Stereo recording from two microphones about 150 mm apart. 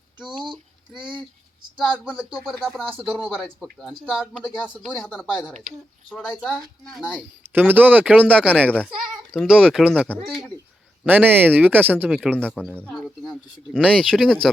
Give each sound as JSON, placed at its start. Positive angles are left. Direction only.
{"t": 0.3, "sound": "speech", "side_deg": -30}
{"t": 0.9, "sound": "speech", "side_deg": -5}
{"t": 1.7, "sound": "speech", "side_deg": 5}
{"t": 7.5, "sound": "speech", "side_deg": -10}
{"t": 8.8, "sound": "a sound", "side_deg": 0}
{"t": 9.6, "sound": "speech", "side_deg": -5}
{"t": 12.5, "sound": "speech", "side_deg": 5}